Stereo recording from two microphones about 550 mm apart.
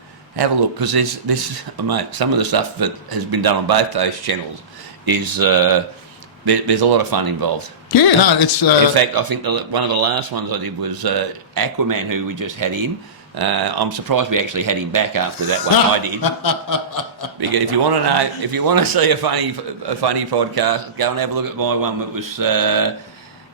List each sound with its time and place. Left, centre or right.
0.3 s speech: right
7.9 s chuckle: left
9.0 s speech: right
16.2 s chuckle: left
17.5 s speech: right